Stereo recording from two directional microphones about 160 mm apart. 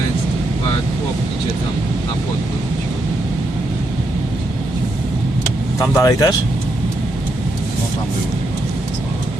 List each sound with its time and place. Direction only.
6.0 s speech: 20° left (ahead or behind)